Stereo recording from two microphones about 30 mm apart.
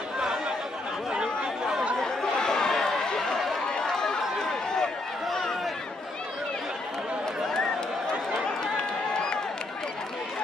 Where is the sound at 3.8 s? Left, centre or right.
Centre.